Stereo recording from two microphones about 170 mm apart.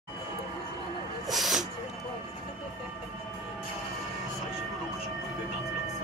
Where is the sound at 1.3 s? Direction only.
Centre (ahead or behind).